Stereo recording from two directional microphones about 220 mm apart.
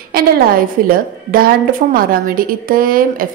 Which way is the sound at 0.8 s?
40° right (ahead or behind).